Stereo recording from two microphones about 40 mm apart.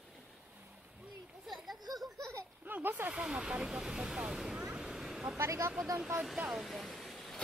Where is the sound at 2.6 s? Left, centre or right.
Right.